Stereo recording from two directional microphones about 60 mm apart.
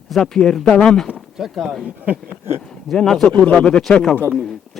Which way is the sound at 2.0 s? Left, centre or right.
Right.